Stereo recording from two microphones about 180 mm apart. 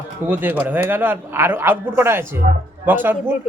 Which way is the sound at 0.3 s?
10° right (ahead or behind).